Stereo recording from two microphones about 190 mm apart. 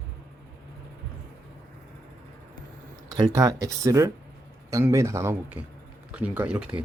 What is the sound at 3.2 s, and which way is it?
Speech, 20° right (ahead or behind).